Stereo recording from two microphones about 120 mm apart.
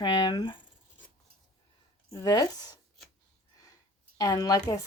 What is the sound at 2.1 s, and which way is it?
Speech, 30° left (ahead or behind).